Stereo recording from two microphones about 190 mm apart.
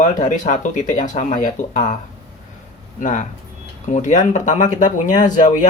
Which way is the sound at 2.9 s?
40° left (ahead or behind).